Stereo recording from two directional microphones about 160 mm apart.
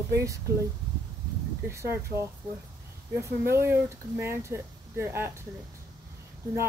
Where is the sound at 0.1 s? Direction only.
20° right (ahead or behind).